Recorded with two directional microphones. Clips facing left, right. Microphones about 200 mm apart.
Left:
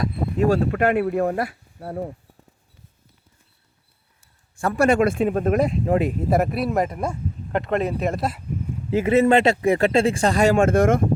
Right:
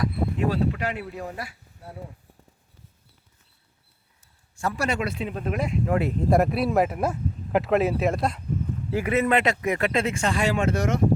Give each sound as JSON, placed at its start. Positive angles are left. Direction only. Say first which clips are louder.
{"t": 0.3, "sound": "speech", "louder": "left 8 dB", "side_deg": 45}
{"t": 4.5, "sound": "speech", "louder": "left 9 dB", "side_deg": 55}
{"t": 6.0, "sound": "speech", "louder": "left 1 dB", "side_deg": 10}
{"t": 8.9, "sound": "speech", "louder": "left 6 dB", "side_deg": 25}